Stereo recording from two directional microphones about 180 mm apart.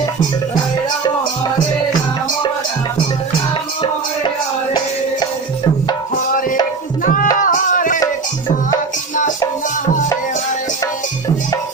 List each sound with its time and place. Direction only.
7.0 s music: 50° left (ahead or behind)